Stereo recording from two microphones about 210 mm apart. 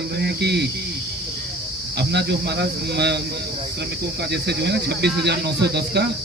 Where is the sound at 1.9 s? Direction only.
50° right (ahead or behind).